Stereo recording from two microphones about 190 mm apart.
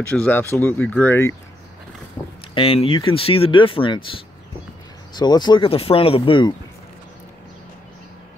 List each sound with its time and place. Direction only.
0.1 s speech: 10° left (ahead or behind)
2.2 s a sound: 10° left (ahead or behind)
2.5 s speech: 30° left (ahead or behind)